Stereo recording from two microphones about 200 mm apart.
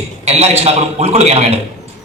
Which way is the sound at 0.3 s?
30° right (ahead or behind).